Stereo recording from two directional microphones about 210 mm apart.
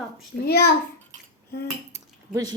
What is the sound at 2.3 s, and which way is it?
Speech, 15° right (ahead or behind).